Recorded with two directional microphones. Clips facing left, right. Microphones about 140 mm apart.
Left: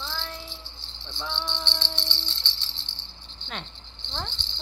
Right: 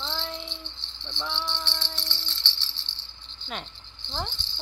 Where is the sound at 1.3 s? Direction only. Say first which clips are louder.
Left 2 dB; 20° left (ahead or behind).